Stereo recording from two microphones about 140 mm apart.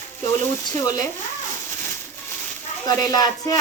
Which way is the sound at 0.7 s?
25° left (ahead or behind).